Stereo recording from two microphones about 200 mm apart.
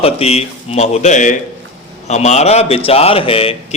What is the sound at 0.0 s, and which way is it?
A man's voice, 30° left (ahead or behind).